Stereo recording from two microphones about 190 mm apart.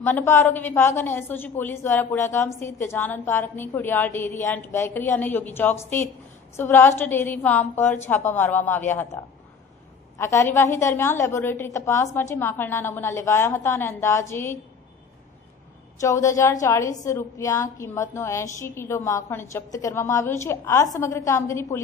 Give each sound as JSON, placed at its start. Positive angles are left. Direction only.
{"t": 0.0, "sound": "a woman's voice", "side_deg": 10}
{"t": 16.0, "sound": "a woman's voice", "side_deg": 15}